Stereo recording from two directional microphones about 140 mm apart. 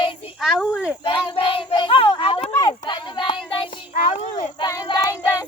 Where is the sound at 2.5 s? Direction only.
25° left (ahead or behind).